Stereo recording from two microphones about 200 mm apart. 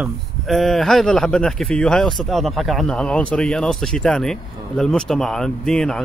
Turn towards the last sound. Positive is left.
turn(degrees=5)  # may be behind; listen again after turning